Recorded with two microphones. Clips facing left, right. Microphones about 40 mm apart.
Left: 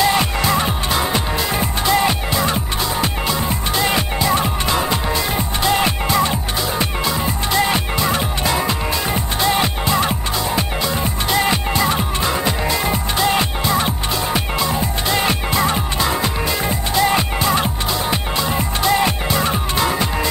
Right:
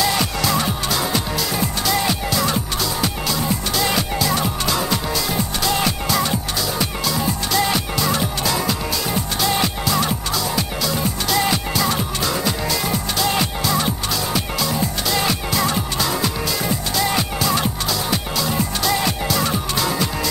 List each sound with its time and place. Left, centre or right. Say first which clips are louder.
0.0 s music: left 3 dB; left